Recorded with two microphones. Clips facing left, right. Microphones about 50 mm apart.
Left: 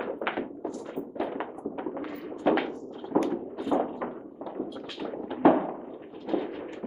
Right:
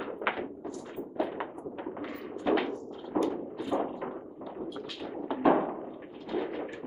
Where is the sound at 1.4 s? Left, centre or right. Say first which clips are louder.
Left 3 dB; centre.